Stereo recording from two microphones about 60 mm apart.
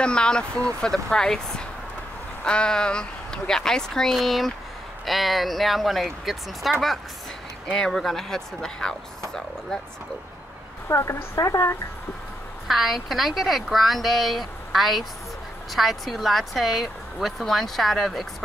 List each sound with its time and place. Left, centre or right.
0.0 s speech: centre
10.9 s a woman's voice: left
12.6 s speech: centre